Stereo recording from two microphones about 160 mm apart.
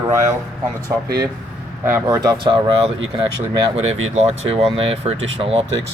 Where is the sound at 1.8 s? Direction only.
15° right (ahead or behind).